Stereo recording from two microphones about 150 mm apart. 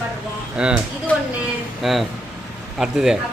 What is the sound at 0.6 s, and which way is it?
Speech, 5° right (ahead or behind).